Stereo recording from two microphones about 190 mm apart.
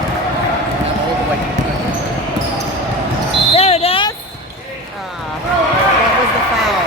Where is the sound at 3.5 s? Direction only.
30° left (ahead or behind).